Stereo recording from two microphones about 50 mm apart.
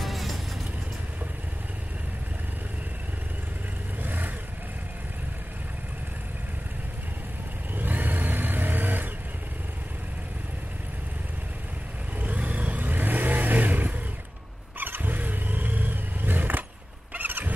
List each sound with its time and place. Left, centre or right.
0.0 s music: centre
4.0 s vehicle: right
7.7 s vehicle: right
12.2 s vehicle: right